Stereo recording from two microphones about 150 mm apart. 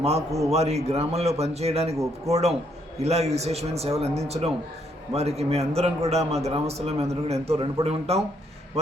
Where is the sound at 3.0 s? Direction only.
45° right (ahead or behind).